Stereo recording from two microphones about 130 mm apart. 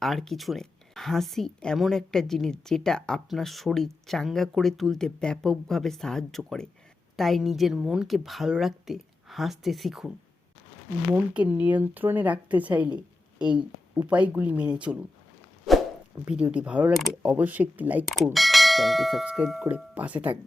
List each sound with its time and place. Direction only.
0.0 s a woman's voice: centre (ahead or behind)
11.1 s speech: 10° right (ahead or behind)
16.2 s speech: 10° right (ahead or behind)
18.0 s a woman's voice: centre (ahead or behind)